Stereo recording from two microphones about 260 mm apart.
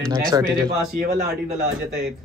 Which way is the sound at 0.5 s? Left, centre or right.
Right.